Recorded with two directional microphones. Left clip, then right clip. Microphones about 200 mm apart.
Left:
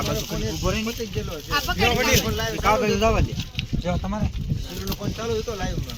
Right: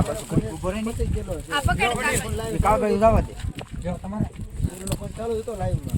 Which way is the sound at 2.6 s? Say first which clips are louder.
Right 2 dB; 55° right (ahead or behind).